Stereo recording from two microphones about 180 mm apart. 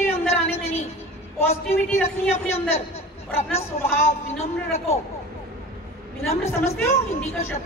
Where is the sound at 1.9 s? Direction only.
10° left (ahead or behind).